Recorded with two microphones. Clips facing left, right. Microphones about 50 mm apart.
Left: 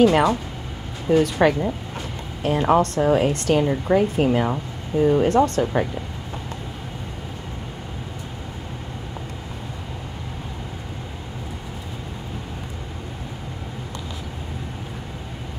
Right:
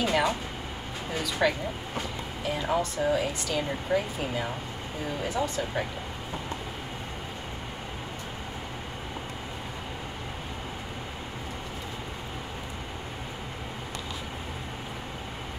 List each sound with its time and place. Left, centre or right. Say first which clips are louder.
0.0 s speech: left 10 dB; left
2.4 s speech: left 10 dB; left
3.3 s speech: left 10 dB; left
3.9 s speech: left 10 dB; left